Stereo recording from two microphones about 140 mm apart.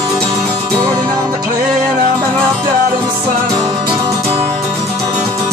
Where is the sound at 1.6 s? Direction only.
5° right (ahead or behind).